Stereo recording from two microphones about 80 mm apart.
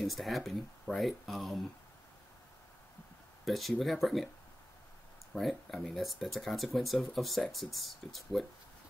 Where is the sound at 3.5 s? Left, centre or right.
Centre.